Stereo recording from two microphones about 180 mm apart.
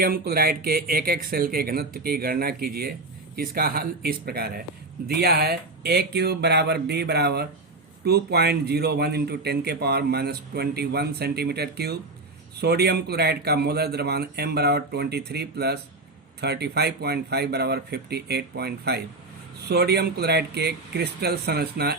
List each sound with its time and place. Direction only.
0.0 s a man's voice: 55° right (ahead or behind)